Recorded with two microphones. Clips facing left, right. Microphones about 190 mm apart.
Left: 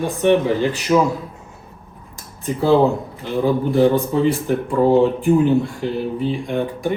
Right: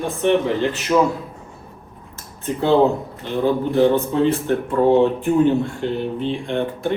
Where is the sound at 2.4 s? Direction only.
5° left (ahead or behind).